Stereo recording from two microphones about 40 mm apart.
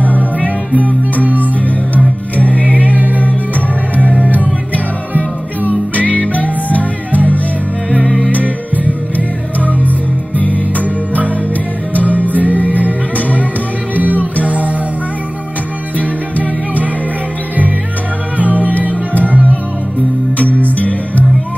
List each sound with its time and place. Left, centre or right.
0.0 s music: left
2.3 s music: left
2.8 s music: right
5.1 s music: right
5.9 s music: left
8.8 s music: right
9.8 s music: left
11.9 s music: right
13.9 s music: right
18.4 s music: right